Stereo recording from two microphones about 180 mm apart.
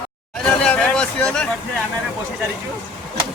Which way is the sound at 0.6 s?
5° left (ahead or behind).